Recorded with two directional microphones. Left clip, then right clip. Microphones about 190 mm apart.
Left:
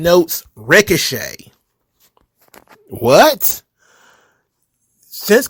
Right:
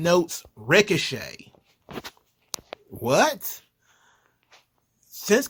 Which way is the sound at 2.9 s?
40° left (ahead or behind).